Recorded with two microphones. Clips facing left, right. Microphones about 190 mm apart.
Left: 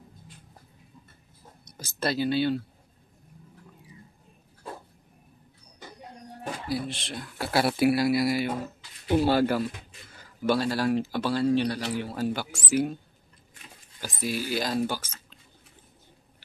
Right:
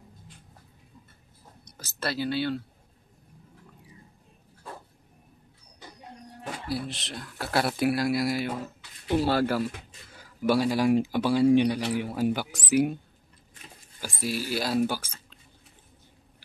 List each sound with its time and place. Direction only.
1.6 s speech: 15° left (ahead or behind)
6.7 s speech: centre (ahead or behind)
10.4 s speech: 10° right (ahead or behind)
14.0 s speech: 5° right (ahead or behind)